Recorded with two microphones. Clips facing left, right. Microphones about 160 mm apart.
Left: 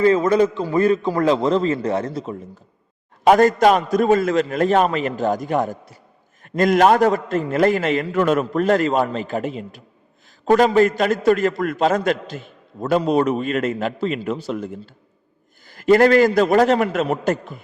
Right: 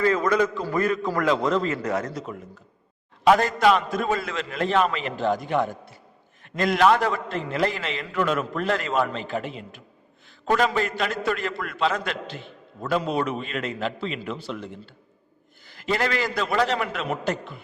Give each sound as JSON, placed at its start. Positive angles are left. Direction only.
{"t": 0.0, "sound": "a man's voice", "side_deg": 25}
{"t": 3.2, "sound": "a man's voice", "side_deg": 45}